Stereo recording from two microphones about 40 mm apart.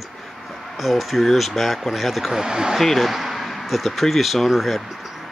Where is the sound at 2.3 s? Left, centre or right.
Centre.